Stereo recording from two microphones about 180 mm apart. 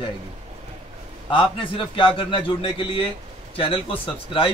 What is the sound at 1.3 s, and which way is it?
A man's voice, 30° left (ahead or behind).